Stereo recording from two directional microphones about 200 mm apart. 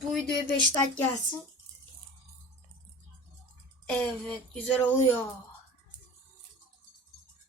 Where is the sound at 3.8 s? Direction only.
5° left (ahead or behind).